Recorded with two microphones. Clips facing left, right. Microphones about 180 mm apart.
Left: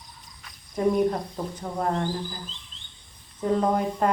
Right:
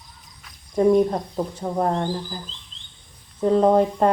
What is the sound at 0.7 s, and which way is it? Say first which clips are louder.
Speech: right 5 dB; 25° right (ahead or behind).